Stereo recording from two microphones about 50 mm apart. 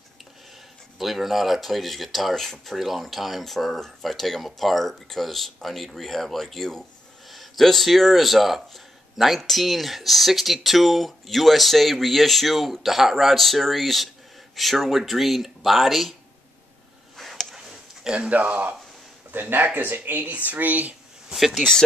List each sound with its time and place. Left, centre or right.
0.9 s speech: centre
2.7 s speech: centre
17.2 s a sound: centre
18.0 s speech: right
19.3 s speech: right
21.3 s speech: centre